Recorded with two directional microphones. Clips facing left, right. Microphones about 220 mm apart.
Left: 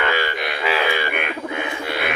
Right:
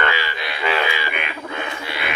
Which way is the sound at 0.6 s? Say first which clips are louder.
Right 1 dB; centre (ahead or behind).